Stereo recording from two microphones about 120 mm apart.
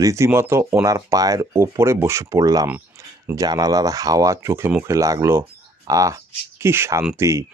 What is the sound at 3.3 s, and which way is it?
Speech, 30° right (ahead or behind).